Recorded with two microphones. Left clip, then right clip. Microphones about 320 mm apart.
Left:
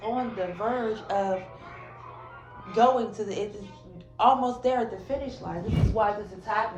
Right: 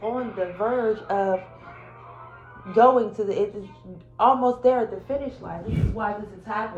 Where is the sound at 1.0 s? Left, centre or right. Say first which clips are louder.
Right 4 dB; centre.